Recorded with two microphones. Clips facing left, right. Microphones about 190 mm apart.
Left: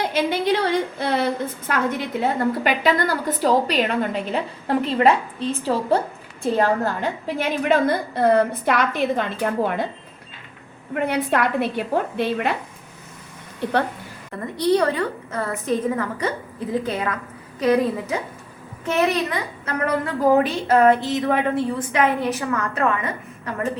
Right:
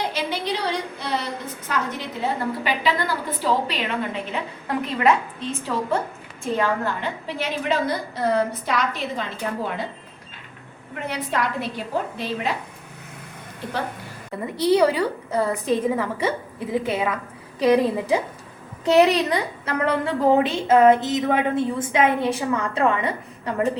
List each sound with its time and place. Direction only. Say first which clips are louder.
0.1 s a woman's voice: left 6 dB; 50° left (ahead or behind)
10.9 s a woman's voice: left 6 dB; 60° left (ahead or behind)
14.6 s a woman's voice: right 1 dB; 10° right (ahead or behind)
17.6 s a woman's voice: right 1 dB; 15° right (ahead or behind)
18.9 s a woman's voice: right 4 dB; 35° right (ahead or behind)